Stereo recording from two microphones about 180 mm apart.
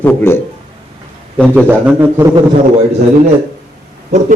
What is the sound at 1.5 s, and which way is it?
Speech, 10° right (ahead or behind).